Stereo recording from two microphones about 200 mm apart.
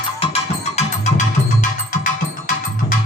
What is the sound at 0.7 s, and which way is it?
Music, 35° left (ahead or behind).